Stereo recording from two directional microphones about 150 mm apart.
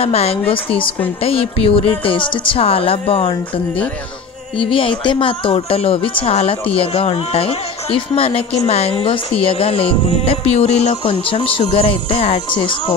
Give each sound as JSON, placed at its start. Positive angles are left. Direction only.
{"t": 0.0, "sound": "speech", "side_deg": 40}
{"t": 4.6, "sound": "speech", "side_deg": 35}